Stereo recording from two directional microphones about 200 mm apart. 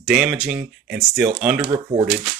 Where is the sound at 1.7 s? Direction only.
25° right (ahead or behind).